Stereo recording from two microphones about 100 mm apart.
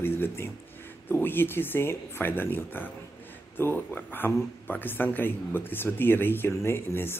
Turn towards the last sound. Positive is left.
turn(degrees=25)  # may be behind; listen again after turning